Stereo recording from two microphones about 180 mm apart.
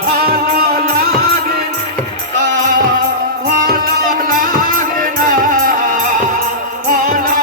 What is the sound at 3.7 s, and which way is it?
Music, 50° right (ahead or behind).